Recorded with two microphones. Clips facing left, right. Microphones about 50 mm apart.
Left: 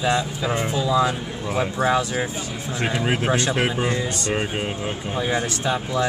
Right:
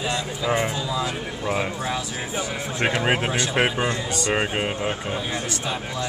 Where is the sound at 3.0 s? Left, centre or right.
Right.